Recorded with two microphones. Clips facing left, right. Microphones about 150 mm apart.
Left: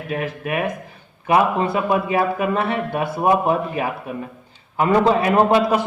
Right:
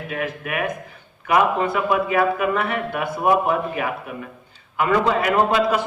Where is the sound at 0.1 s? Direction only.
30° left (ahead or behind).